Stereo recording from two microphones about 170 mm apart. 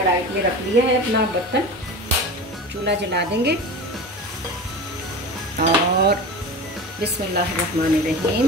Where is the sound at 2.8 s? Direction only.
80° right.